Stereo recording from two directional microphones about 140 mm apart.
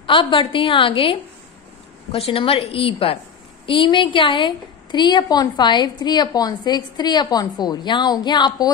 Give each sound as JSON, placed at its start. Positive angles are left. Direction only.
{"t": 0.0, "sound": "a woman's voice", "side_deg": 35}
{"t": 2.1, "sound": "a woman's voice", "side_deg": 40}